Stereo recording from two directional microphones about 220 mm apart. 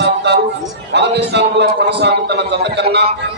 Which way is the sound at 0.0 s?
50° right (ahead or behind).